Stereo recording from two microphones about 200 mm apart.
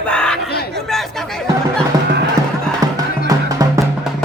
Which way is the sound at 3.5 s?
15° right (ahead or behind).